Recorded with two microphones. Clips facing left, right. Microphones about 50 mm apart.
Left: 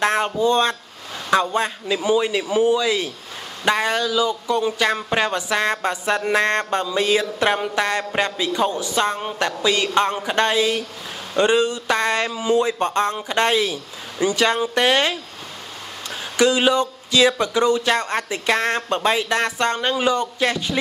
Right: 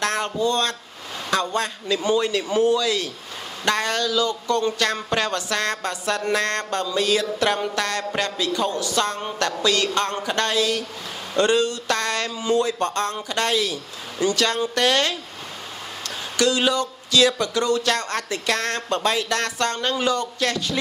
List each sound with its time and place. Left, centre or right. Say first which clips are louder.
0.0 s a man's voice: left 4 dB; left
16.3 s speech: left 4 dB; centre